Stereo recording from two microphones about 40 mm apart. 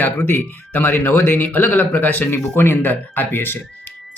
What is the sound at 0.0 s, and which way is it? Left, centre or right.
Speech, left.